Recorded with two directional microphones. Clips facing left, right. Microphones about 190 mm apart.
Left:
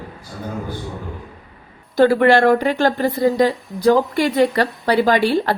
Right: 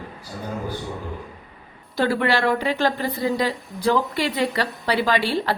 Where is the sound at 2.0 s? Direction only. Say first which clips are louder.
Left 8 dB; 50° left (ahead or behind).